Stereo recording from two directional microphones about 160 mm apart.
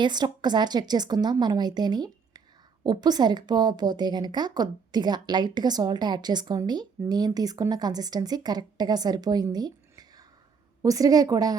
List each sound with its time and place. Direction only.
0.0 s a woman's voice: 25° right (ahead or behind)